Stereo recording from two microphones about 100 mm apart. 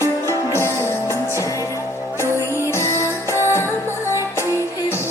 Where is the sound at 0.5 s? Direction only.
25° left (ahead or behind).